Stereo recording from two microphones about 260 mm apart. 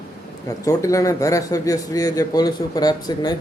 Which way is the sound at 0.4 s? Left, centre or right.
Centre.